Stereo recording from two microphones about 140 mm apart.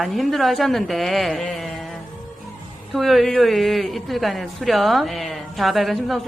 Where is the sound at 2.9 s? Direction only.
Centre (ahead or behind).